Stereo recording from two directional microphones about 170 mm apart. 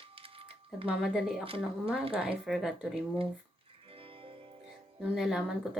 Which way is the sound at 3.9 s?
35° right (ahead or behind).